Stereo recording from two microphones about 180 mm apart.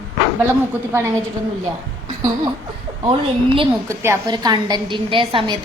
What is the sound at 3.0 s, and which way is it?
Speech, 30° right (ahead or behind).